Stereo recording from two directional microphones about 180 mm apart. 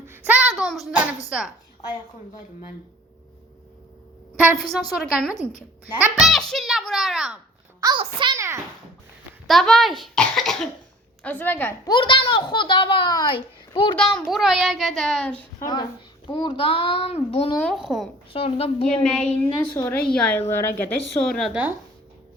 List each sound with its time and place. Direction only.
0.1 s a sound: 10° right (ahead or behind)
4.5 s a child's voice: centre (ahead or behind)
7.8 s a child's voice: 25° right (ahead or behind)
9.5 s a child's voice: centre (ahead or behind)
11.9 s a child's voice: 25° left (ahead or behind)
13.9 s a child's voice: 5° left (ahead or behind)
15.6 s a child's voice: 25° left (ahead or behind)
17.6 s a child's voice: centre (ahead or behind)
18.3 s a woman's voice: 35° left (ahead or behind)
18.9 s a child's voice: 5° left (ahead or behind)